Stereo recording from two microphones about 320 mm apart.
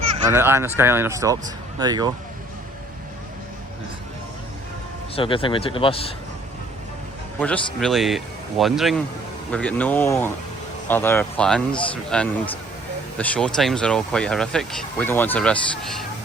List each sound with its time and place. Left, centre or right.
0.3 s speech: centre
5.1 s a man's voice: centre
7.3 s speech: centre